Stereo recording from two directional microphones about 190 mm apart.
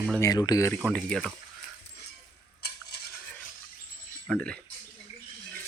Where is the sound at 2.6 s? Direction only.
60° left (ahead or behind).